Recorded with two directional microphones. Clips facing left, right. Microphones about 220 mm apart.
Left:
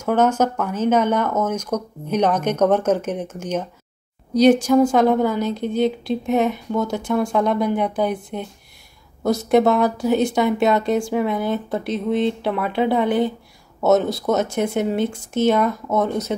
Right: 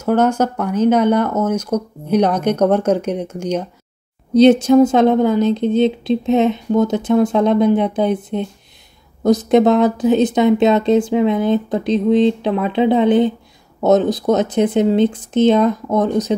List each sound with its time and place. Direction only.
0.0 s speech: 10° right (ahead or behind)
4.3 s speech: 25° right (ahead or behind)